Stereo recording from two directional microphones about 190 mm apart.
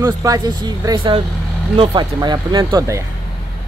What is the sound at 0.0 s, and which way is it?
Speech, 20° right (ahead or behind).